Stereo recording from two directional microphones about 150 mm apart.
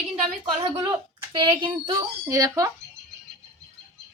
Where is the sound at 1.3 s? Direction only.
30° right (ahead or behind).